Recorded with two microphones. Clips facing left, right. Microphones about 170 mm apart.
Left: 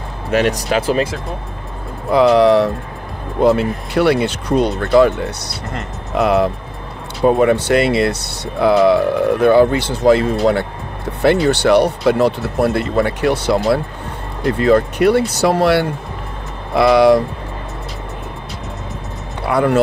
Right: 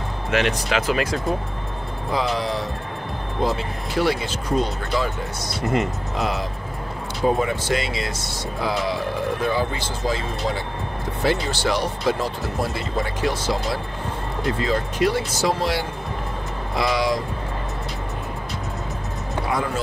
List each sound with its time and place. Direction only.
0.3 s speech: 40° left (ahead or behind)
2.0 s speech: 65° left (ahead or behind)
14.6 s speech: 60° left (ahead or behind)
19.4 s speech: 65° left (ahead or behind)